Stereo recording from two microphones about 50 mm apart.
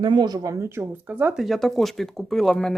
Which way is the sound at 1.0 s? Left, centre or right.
Right.